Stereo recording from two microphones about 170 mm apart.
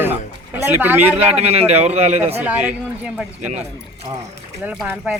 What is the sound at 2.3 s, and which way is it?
Speech, 10° right (ahead or behind).